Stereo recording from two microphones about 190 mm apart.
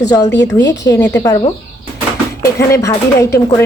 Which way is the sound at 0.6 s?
65° left (ahead or behind).